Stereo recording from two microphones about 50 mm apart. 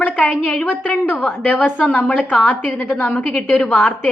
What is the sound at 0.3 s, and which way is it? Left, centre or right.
Speech, centre.